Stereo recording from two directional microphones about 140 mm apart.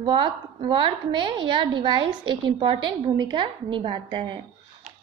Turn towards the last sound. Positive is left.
turn(degrees=-35)  # may be behind; listen again after turning